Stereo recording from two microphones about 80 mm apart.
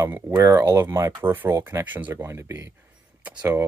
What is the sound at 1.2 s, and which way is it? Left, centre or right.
Speech, right.